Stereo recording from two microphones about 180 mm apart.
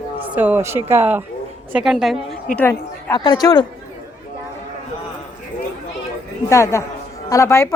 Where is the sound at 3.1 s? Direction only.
20° left (ahead or behind).